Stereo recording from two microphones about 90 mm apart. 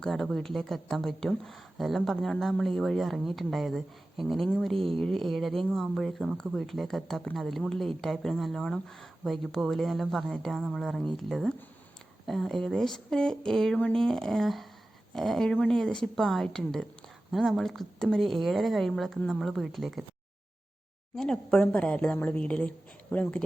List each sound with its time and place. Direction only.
0.0 s a woman's voice: 5° left (ahead or behind)
21.2 s a woman's voice: 5° left (ahead or behind)